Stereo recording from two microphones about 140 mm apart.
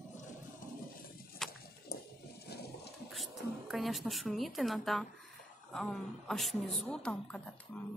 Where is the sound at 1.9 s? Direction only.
90° left.